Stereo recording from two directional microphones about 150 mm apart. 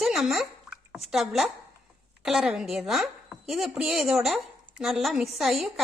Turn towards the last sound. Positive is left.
turn(degrees=0)  # may be behind; listen again after turning